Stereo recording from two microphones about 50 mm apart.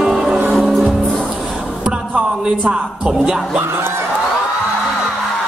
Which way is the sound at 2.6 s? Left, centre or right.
Centre.